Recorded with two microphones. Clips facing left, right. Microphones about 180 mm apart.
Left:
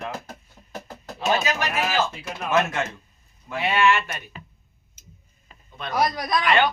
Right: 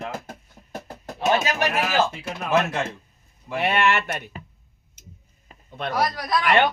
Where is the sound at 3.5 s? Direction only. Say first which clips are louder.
Even; 60° right (ahead or behind).